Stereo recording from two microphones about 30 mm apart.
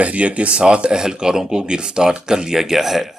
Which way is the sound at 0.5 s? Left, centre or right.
Right.